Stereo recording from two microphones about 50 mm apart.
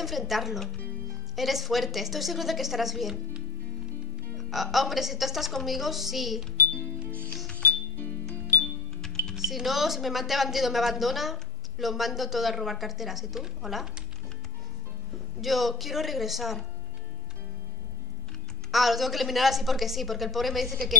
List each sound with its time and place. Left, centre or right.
0.0 s a woman's voice: centre
4.4 s a woman's voice: centre
7.5 s music: left
8.5 s music: centre
9.3 s a woman's voice: centre
15.4 s a woman's voice: centre
18.7 s a woman's voice: centre